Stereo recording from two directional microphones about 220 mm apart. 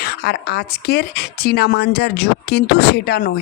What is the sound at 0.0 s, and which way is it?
Speech, 45° left (ahead or behind).